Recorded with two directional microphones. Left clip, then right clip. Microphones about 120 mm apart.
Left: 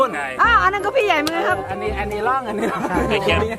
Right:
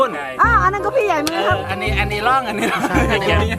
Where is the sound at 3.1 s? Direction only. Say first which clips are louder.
Right 1 dB; 10° left (ahead or behind).